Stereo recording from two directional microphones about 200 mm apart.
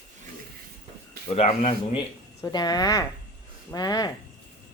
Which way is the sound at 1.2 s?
30° left (ahead or behind).